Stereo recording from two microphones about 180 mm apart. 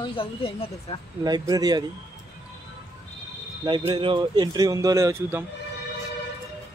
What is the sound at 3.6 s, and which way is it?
A man's voice, 25° right (ahead or behind).